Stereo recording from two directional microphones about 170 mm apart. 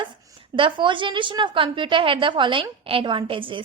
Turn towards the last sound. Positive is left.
turn(degrees=-30)  # may be behind; listen again after turning